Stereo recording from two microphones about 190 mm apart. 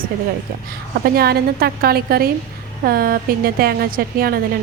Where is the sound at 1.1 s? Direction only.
55° right (ahead or behind).